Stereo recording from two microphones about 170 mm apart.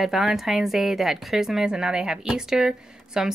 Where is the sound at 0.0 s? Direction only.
Centre (ahead or behind).